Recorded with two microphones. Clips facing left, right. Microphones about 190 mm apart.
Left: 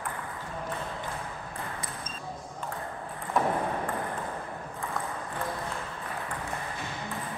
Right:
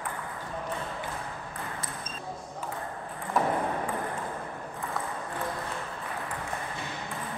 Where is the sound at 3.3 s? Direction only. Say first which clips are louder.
Even; centre (ahead or behind).